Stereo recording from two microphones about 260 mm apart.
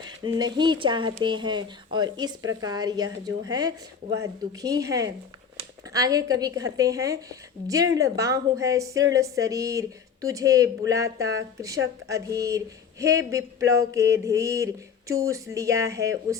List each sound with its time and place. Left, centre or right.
0.3 s speech: centre